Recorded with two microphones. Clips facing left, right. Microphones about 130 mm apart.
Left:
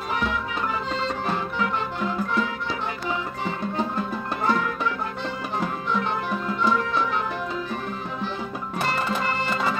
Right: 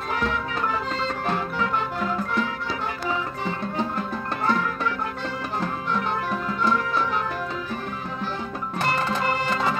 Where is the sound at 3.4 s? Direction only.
5° left (ahead or behind).